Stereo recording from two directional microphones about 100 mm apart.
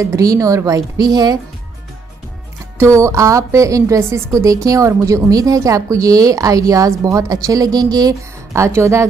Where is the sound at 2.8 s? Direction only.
30° right (ahead or behind).